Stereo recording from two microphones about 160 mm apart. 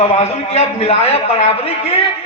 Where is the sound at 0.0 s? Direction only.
40° left (ahead or behind).